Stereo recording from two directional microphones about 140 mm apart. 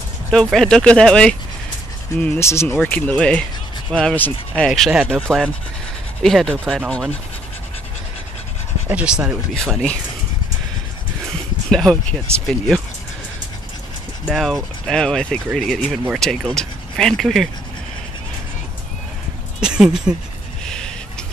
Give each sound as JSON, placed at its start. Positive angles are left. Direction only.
{"t": 0.3, "sound": "speech", "side_deg": 5}
{"t": 2.2, "sound": "speech", "side_deg": 20}
{"t": 8.8, "sound": "speech", "side_deg": -10}
{"t": 11.7, "sound": "speech", "side_deg": 5}
{"t": 14.2, "sound": "speech", "side_deg": 0}
{"t": 19.6, "sound": "speech", "side_deg": -5}
{"t": 20.6, "sound": "a sound", "side_deg": 5}